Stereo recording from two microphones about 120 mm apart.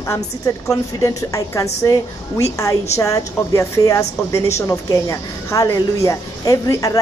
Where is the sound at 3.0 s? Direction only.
25° left (ahead or behind).